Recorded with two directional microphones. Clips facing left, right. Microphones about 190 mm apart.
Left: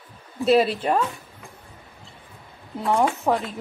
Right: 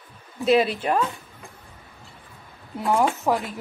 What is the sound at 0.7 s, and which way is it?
Speech, centre (ahead or behind).